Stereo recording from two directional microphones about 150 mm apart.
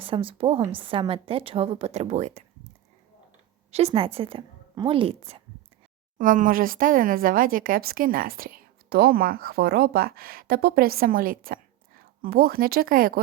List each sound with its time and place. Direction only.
0.0 s speech: 35° right (ahead or behind)
3.7 s a woman's voice: 40° right (ahead or behind)
6.1 s speech: 60° right (ahead or behind)